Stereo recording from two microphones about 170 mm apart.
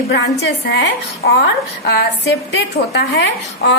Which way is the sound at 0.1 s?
80° left.